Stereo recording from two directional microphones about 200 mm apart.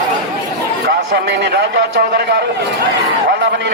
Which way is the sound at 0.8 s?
55° right (ahead or behind).